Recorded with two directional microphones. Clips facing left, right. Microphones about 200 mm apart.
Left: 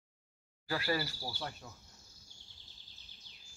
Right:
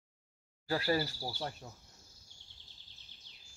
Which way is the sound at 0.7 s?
35° right (ahead or behind).